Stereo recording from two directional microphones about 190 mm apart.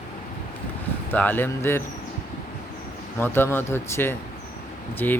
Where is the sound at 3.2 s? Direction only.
10° left (ahead or behind).